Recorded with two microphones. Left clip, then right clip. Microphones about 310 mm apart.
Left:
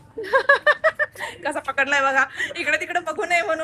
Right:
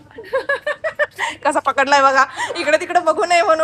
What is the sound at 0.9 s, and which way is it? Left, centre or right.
A woman's voice, right.